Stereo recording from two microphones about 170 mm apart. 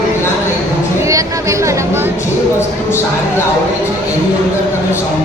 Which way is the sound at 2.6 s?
15° left (ahead or behind).